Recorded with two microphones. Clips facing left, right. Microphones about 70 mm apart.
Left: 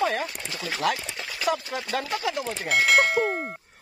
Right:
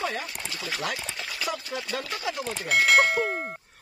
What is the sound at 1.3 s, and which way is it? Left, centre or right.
Speech, left.